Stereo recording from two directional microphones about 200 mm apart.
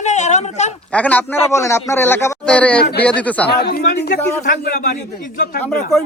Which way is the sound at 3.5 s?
55° left (ahead or behind).